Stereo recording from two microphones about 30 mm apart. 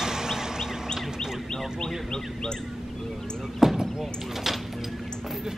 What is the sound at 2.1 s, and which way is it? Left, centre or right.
Bird, left.